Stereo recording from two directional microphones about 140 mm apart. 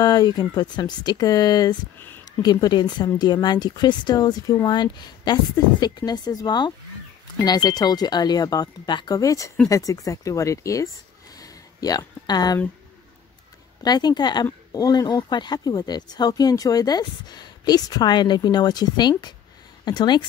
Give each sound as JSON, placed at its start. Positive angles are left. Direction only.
{"t": 0.0, "sound": "speech", "side_deg": 30}
{"t": 11.3, "sound": "a sound", "side_deg": 25}
{"t": 13.8, "sound": "speech", "side_deg": 30}